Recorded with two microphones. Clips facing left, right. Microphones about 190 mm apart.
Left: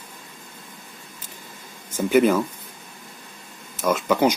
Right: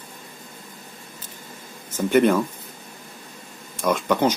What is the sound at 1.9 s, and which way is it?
Speech, 5° left (ahead or behind).